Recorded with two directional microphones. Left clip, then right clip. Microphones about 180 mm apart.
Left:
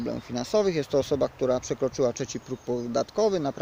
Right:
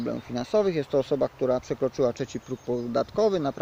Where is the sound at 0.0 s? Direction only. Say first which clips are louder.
Right 1 dB; 15° right (ahead or behind).